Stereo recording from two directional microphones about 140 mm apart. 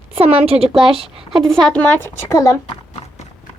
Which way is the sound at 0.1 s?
45° right (ahead or behind).